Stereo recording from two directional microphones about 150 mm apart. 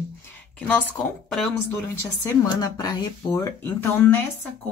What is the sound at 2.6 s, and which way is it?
Speech, 25° left (ahead or behind).